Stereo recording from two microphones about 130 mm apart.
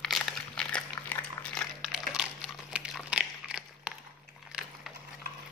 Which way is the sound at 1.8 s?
5° right (ahead or behind).